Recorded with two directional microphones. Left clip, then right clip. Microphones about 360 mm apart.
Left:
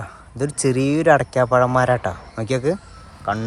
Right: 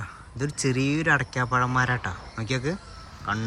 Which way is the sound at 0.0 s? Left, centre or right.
Centre.